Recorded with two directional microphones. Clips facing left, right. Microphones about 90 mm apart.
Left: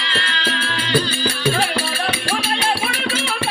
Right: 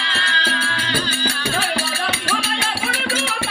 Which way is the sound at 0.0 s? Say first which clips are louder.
Right 1 dB; 25° right (ahead or behind).